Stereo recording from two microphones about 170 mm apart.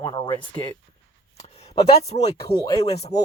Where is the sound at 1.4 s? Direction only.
40° left (ahead or behind).